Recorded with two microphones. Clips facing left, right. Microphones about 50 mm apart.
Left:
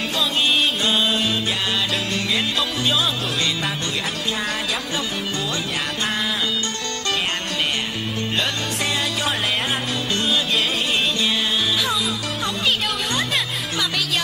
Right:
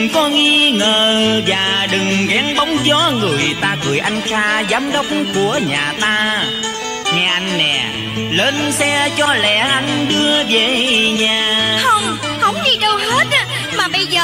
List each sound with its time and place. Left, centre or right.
0.0 s music: right
3.6 s music: right
7.1 s speech: right
8.4 s music: right